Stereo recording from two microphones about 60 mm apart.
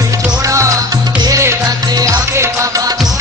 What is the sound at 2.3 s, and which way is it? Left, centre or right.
Music, right.